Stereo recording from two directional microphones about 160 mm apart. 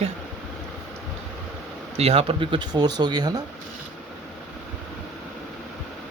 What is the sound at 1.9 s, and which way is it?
Speech, 40° right (ahead or behind).